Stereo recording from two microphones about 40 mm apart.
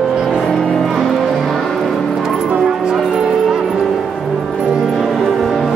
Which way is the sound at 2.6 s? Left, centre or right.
Centre.